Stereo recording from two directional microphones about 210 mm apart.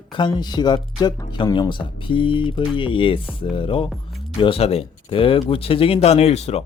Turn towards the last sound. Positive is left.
turn(degrees=30)  # may be behind; listen again after turning